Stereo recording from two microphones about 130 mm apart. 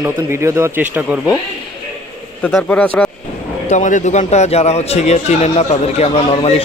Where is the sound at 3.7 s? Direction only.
70° left (ahead or behind); by 6.3 s 50° left (ahead or behind).